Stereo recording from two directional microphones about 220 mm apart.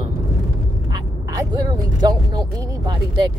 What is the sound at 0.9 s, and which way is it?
Speech, 15° right (ahead or behind).